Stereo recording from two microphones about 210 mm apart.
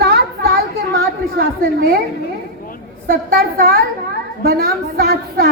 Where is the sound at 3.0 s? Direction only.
45° right (ahead or behind).